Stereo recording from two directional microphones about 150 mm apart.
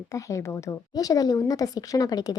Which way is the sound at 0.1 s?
20° left (ahead or behind).